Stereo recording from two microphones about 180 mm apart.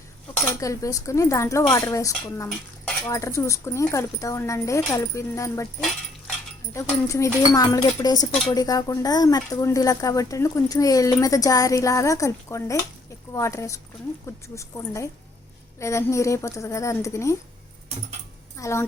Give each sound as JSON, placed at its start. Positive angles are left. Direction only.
{"t": 0.6, "sound": "speech", "side_deg": 20}
{"t": 6.7, "sound": "speech", "side_deg": 15}
{"t": 18.5, "sound": "speech", "side_deg": 15}